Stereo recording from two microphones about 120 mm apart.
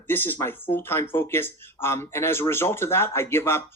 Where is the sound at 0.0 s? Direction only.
15° left (ahead or behind).